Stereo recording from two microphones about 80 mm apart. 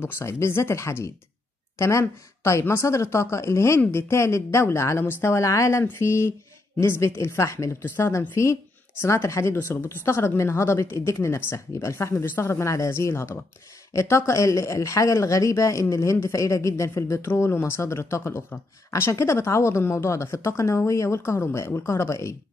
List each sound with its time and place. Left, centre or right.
0.0 s speech: left